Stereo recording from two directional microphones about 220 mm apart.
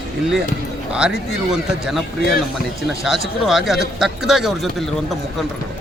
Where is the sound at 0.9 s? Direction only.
5° right (ahead or behind).